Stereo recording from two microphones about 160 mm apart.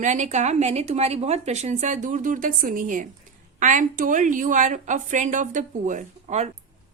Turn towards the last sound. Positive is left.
turn(degrees=-50)  # may be behind; listen again after turning